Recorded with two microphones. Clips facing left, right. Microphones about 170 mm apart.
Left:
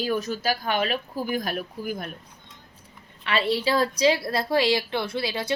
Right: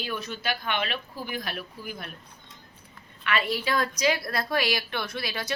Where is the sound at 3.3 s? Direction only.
30° left (ahead or behind).